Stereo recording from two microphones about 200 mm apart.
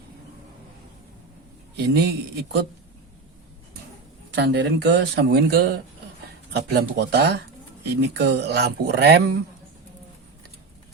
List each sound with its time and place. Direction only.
1.7 s speech: 55° right (ahead or behind)
4.4 s speech: 60° right (ahead or behind)